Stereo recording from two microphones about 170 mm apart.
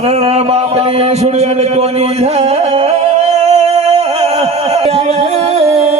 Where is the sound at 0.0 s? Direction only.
35° right (ahead or behind).